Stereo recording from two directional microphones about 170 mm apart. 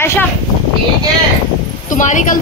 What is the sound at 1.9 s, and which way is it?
Speech, 50° left (ahead or behind).